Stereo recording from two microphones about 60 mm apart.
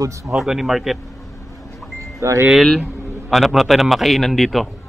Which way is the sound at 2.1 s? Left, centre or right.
Right.